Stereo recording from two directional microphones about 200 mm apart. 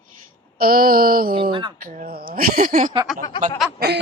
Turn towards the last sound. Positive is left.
turn(degrees=-55)  # may be behind; listen again after turning